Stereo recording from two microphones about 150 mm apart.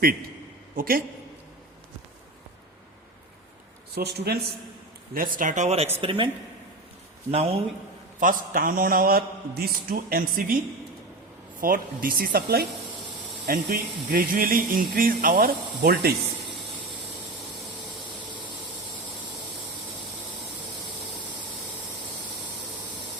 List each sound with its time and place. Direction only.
0.8 s speech: 70° right (ahead or behind)
3.9 s speech: 90° right
5.1 s speech: 70° right (ahead or behind); by 5.9 s 45° right (ahead or behind)
6.0 s a man's voice: 35° right (ahead or behind)
8.2 s speech: 65° right (ahead or behind)
11.6 s speech: 70° right (ahead or behind); by 16.1 s 90° right